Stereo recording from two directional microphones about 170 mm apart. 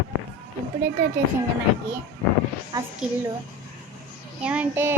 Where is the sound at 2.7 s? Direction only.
20° right (ahead or behind).